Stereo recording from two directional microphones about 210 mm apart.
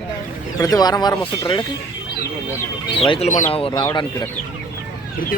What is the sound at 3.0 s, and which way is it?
Speech, 30° left (ahead or behind).